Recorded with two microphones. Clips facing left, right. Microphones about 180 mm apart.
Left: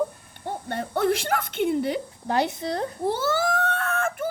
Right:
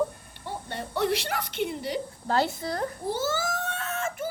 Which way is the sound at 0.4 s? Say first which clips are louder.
Left 5 dB; 50° left (ahead or behind).